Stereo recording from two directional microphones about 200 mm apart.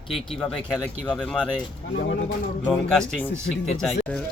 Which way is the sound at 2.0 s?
55° left (ahead or behind).